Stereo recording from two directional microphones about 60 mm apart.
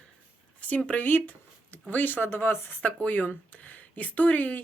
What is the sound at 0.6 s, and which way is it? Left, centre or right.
Speech, left.